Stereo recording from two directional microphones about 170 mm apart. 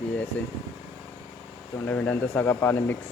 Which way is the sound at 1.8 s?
10° left (ahead or behind).